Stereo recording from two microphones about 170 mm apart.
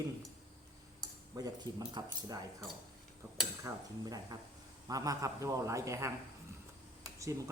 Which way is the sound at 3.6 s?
20° right (ahead or behind).